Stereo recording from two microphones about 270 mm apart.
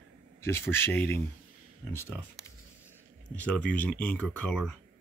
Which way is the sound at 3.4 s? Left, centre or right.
Centre.